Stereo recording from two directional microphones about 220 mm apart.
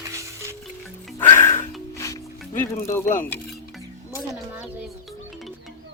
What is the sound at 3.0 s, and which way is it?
Speech, 35° left (ahead or behind).